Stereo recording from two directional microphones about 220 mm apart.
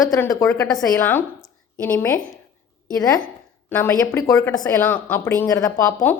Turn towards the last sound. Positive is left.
turn(degrees=10)  # may be behind; listen again after turning